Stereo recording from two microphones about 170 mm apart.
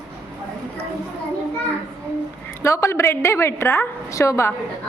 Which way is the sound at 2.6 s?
15° left (ahead or behind).